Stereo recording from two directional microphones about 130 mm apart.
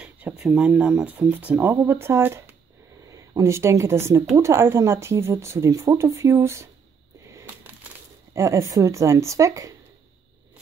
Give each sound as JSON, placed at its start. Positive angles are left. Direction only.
{"t": 0.0, "sound": "a woman's voice", "side_deg": -5}
{"t": 7.3, "sound": "a sound", "side_deg": -15}
{"t": 8.3, "sound": "a woman's voice", "side_deg": -25}